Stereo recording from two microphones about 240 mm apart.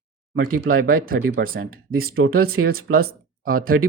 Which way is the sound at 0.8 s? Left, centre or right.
Right.